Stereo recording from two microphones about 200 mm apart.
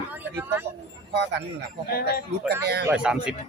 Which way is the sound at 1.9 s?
50° left (ahead or behind).